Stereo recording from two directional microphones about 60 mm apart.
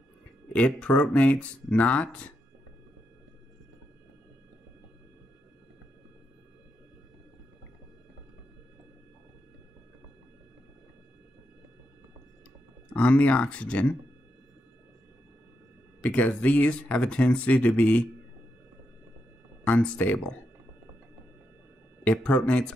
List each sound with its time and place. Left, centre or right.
0.8 s speech: left
12.9 s speech: left
16.0 s speech: left
19.6 s speech: left
22.0 s speech: centre